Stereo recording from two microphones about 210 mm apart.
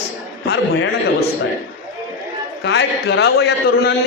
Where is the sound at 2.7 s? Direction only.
55° left (ahead or behind).